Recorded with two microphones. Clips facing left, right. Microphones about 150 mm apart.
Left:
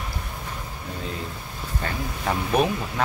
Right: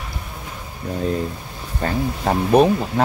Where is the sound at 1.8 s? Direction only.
35° right (ahead or behind).